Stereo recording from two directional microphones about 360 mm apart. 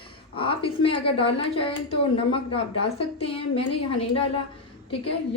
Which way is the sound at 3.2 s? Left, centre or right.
Centre.